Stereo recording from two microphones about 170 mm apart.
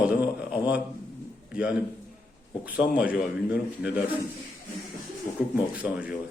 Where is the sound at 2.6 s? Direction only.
10° right (ahead or behind).